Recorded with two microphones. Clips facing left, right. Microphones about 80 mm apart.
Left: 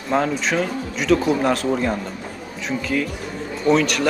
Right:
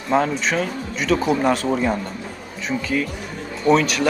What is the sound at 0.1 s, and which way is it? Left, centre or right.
Speech, centre.